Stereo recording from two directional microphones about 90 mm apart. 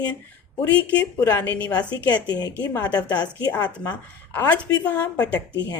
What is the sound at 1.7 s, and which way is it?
Speech, 50° left (ahead or behind).